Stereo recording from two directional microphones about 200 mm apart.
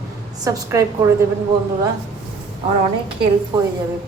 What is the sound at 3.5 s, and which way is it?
Speech, 25° right (ahead or behind).